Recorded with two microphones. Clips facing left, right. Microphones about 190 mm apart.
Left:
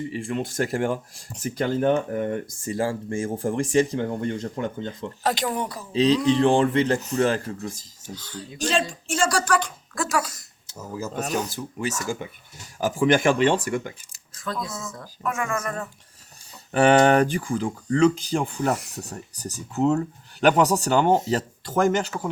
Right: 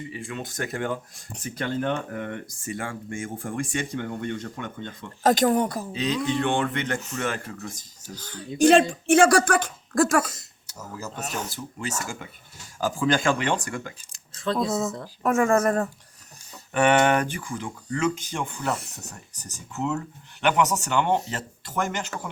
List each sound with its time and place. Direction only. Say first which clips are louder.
0.5 s speech: left 4 dB; 30° left (ahead or behind)
5.2 s speech: right 6 dB; 45° right (ahead or behind)
5.9 s speech: left 7 dB; 35° left (ahead or behind)
8.1 s speech: right 1 dB; 50° right (ahead or behind)
11.1 s speech: left 7 dB; 45° left (ahead or behind)
12.8 s speech: left 4 dB; 25° left (ahead or behind)
14.3 s speech: right 7 dB; 25° right (ahead or behind)
15.2 s speech: right 7 dB; 40° right (ahead or behind)
16.7 s speech: left 4 dB; 35° left (ahead or behind)